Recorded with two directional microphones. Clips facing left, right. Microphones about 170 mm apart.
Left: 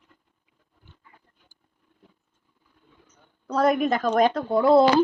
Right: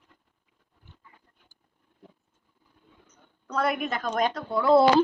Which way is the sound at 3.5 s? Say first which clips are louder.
Left 6 dB; 40° left (ahead or behind).